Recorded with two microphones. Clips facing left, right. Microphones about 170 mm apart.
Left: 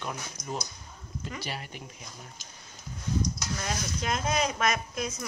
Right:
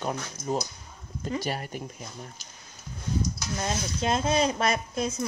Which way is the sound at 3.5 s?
30° right (ahead or behind).